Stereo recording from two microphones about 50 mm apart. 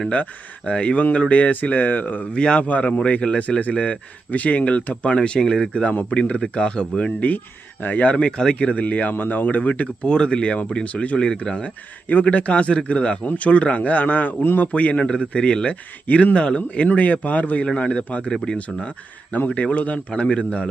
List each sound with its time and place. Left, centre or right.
0.1 s speech: left
2.3 s speech: centre
2.6 s speech: left
5.0 s speech: left
7.3 s speech: left
8.1 s speech: centre
8.5 s speech: left
11.2 s a man's voice: centre; by 14.7 s left
14.7 s speech: left
18.3 s speech: centre
18.5 s speech: left